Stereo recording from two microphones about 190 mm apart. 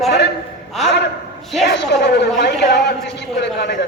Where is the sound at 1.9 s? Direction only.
60° left (ahead or behind).